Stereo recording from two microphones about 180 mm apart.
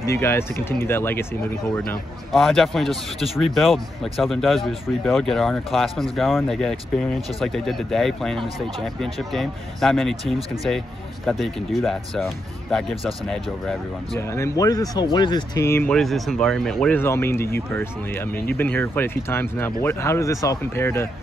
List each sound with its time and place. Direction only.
0.0 s speech: 15° left (ahead or behind)
1.8 s speech: centre (ahead or behind)
14.2 s speech: 15° left (ahead or behind)